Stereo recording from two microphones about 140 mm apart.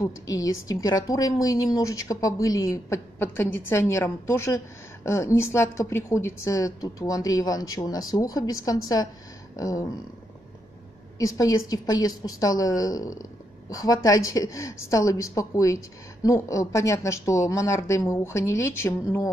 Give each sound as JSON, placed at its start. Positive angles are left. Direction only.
{"t": 0.0, "sound": "a woman's voice", "side_deg": 25}
{"t": 11.1, "sound": "a woman's voice", "side_deg": 25}